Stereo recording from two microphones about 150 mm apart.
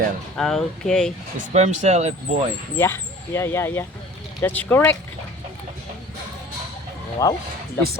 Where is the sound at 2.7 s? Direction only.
15° left (ahead or behind).